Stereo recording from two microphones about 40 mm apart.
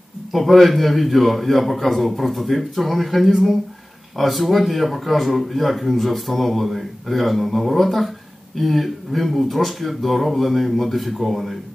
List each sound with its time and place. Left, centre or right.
0.3 s speech: centre